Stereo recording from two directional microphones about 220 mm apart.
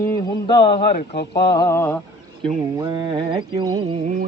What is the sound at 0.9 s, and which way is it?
Speech, 50° left (ahead or behind).